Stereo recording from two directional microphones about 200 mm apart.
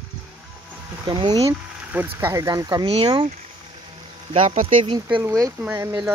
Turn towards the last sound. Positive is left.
turn(degrees=-15)  # may be behind; listen again after turning